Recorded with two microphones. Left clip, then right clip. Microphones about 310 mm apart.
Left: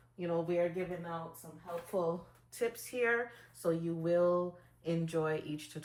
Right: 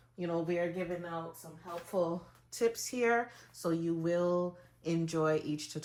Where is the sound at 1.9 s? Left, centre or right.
Right.